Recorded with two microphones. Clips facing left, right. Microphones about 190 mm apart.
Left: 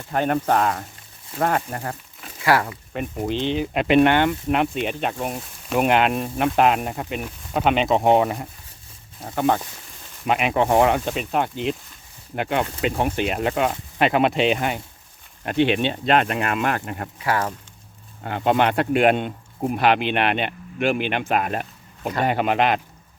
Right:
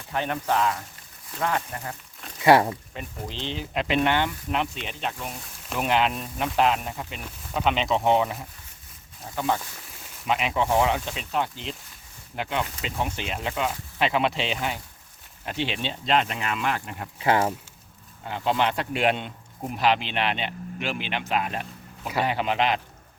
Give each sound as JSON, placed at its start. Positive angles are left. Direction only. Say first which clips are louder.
{"t": 0.1, "sound": "speech", "louder": "left 6 dB", "side_deg": 50}
{"t": 2.4, "sound": "speech", "louder": "right 3 dB", "side_deg": -25}
{"t": 2.9, "sound": "speech", "louder": "left 10 dB", "side_deg": 60}
{"t": 17.2, "sound": "speech", "louder": "right 2 dB", "side_deg": -25}
{"t": 18.2, "sound": "speech", "louder": "left 5 dB", "side_deg": 55}